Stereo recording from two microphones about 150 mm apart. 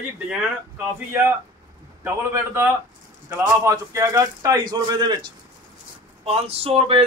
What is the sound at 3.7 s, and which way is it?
Speech, 20° right (ahead or behind).